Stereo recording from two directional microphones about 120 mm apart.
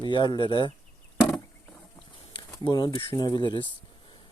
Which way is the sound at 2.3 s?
40° left (ahead or behind).